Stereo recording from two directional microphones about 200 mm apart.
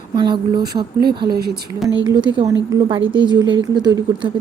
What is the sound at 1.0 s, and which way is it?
Speech, 50° right (ahead or behind).